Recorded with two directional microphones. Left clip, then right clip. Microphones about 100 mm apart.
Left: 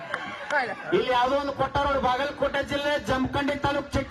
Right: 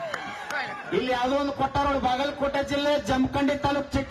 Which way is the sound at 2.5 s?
45° right (ahead or behind).